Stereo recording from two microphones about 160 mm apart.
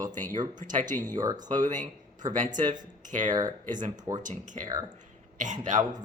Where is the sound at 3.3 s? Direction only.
25° right (ahead or behind).